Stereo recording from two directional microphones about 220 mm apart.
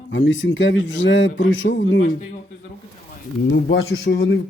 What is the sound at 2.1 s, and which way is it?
Speech, 35° left (ahead or behind).